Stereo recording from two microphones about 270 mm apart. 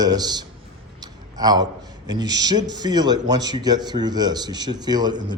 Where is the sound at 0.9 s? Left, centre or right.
Centre.